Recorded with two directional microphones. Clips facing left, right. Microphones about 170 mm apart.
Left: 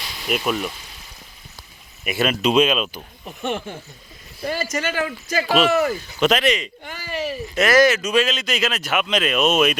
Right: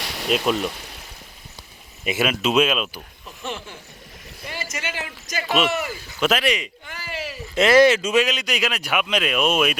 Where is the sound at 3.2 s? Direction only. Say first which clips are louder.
Left 7 dB; 30° left (ahead or behind).